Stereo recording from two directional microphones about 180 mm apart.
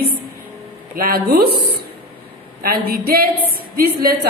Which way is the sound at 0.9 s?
55° right (ahead or behind).